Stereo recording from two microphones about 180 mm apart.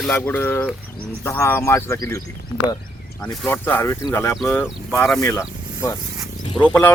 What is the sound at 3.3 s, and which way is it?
Speech, 10° left (ahead or behind).